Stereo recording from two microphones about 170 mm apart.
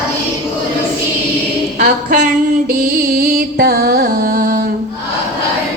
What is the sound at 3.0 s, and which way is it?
Music, 65° right (ahead or behind).